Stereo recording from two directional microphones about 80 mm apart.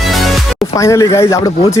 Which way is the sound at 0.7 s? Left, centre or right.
Left.